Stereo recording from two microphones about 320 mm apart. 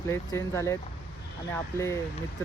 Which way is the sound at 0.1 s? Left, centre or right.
Centre.